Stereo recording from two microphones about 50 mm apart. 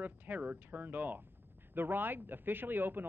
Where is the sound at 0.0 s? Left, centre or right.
Right.